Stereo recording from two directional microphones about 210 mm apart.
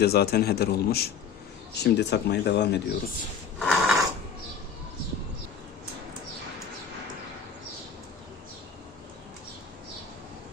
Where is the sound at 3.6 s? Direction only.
Centre (ahead or behind).